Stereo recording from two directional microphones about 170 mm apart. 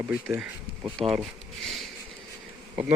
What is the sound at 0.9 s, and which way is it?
Speech, centre (ahead or behind).